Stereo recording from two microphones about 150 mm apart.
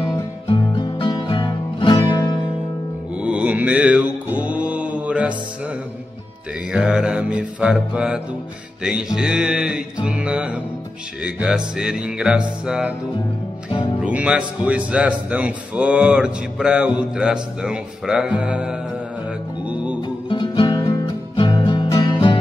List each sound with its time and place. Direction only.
0.5 s music: 30° left (ahead or behind)
3.2 s mantra: 10° right (ahead or behind)
6.7 s speech: 5° right (ahead or behind)
8.8 s music: 5° right (ahead or behind)
13.7 s music: 30° left (ahead or behind)
14.0 s speech: 10° right (ahead or behind)
19.6 s music: 10° right (ahead or behind)
20.0 s music: 35° left (ahead or behind)